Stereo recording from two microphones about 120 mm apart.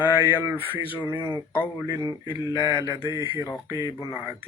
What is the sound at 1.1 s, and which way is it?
Speech, 45° left (ahead or behind).